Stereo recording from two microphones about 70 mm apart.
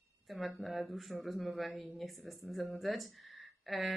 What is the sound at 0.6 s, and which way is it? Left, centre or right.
Speech, centre.